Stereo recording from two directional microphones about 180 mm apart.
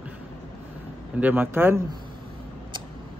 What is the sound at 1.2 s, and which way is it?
Speech, 10° right (ahead or behind).